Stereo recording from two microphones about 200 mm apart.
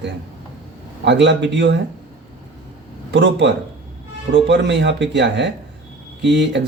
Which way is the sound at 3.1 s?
60° right (ahead or behind).